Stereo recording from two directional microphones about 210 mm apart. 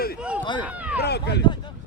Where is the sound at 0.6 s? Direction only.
5° right (ahead or behind).